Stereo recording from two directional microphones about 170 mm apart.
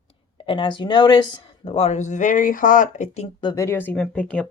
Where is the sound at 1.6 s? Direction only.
35° left (ahead or behind).